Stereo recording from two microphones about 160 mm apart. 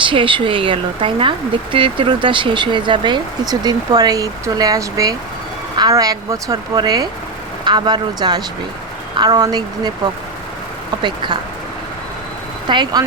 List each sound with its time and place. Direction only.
0.0 s speech: 30° right (ahead or behind)
10.9 s speech: 25° right (ahead or behind)
12.6 s speech: 30° right (ahead or behind)